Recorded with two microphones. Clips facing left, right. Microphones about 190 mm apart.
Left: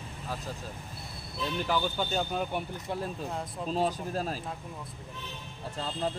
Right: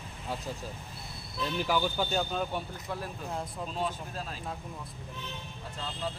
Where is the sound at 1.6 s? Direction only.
10° right (ahead or behind).